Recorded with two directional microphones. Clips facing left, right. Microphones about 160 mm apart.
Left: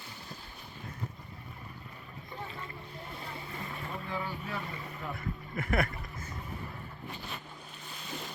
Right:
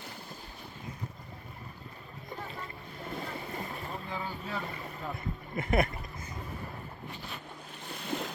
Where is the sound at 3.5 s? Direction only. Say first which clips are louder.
Right 2 dB; 35° right (ahead or behind).